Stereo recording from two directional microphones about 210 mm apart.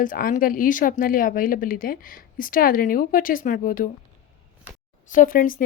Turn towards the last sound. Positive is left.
turn(degrees=40)  # may be behind; listen again after turning